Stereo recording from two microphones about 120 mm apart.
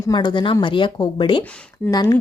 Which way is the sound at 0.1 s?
40° left (ahead or behind).